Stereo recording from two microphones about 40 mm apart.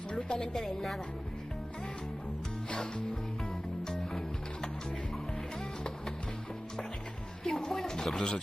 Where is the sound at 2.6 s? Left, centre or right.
Centre.